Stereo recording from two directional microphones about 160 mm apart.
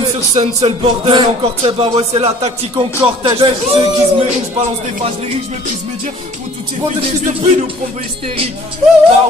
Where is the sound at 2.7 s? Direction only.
25° right (ahead or behind).